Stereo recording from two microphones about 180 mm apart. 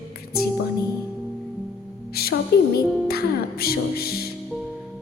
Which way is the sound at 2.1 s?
60° left (ahead or behind).